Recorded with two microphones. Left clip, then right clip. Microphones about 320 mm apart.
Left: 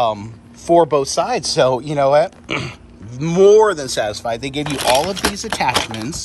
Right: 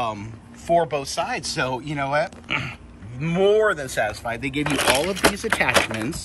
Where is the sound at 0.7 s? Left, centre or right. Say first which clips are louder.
Left 7 dB; centre.